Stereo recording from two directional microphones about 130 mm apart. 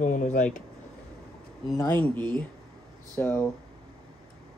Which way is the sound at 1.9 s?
10° left (ahead or behind).